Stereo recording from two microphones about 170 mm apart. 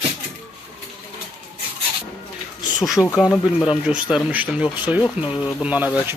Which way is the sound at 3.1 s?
Centre (ahead or behind).